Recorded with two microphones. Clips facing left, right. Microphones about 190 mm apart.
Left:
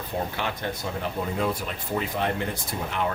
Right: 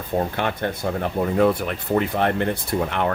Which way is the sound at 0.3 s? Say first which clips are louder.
Right 6 dB; 55° right (ahead or behind).